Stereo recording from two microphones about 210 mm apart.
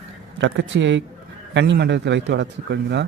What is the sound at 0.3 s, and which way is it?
A man's voice, 60° right (ahead or behind).